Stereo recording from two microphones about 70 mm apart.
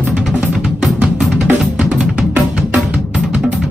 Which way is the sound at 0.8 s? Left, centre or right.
Centre.